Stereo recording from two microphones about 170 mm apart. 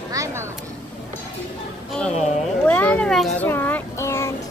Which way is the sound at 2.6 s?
5° left (ahead or behind).